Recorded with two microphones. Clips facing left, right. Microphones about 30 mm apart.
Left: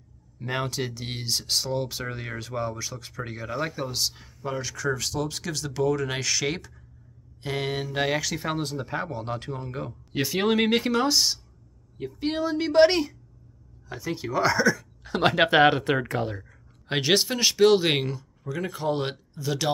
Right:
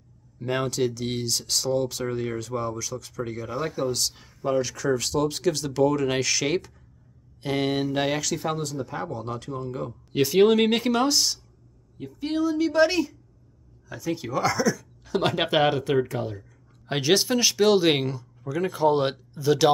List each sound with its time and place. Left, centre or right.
0.4 s speech: centre
4.1 s speech: centre
8.2 s speech: centre
8.6 s speech: left
9.8 s speech: centre
12.3 s a woman's voice: left
13.8 s speech: left
17.0 s speech: centre